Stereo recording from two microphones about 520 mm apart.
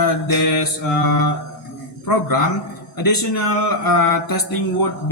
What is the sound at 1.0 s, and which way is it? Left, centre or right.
A man's voice, left.